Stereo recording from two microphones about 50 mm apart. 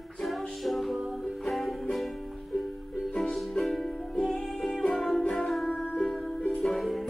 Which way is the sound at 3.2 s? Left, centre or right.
Centre.